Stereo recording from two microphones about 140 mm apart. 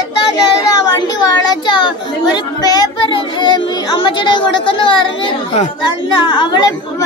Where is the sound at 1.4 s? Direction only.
30° left (ahead or behind).